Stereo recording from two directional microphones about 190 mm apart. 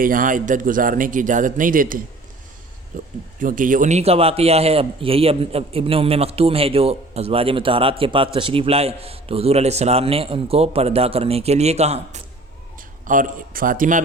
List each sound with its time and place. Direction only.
0.0 s a man's voice: 45° right (ahead or behind)
2.9 s a sound: 45° right (ahead or behind)
3.4 s a man's voice: 45° right (ahead or behind)
13.1 s a man's voice: 45° right (ahead or behind)